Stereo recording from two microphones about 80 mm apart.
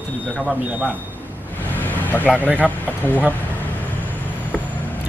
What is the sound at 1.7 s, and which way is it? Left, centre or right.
Vehicle, left.